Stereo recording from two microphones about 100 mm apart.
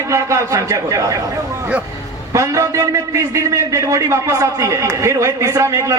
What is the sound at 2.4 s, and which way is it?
A man's voice, 30° right (ahead or behind).